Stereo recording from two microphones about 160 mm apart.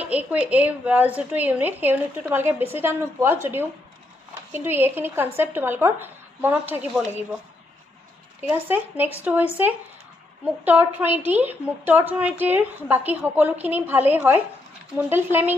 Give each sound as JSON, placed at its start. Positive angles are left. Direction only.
{"t": 0.0, "sound": "a woman's voice", "side_deg": -10}
{"t": 4.5, "sound": "a woman's voice", "side_deg": -15}
{"t": 8.4, "sound": "a woman's voice", "side_deg": -15}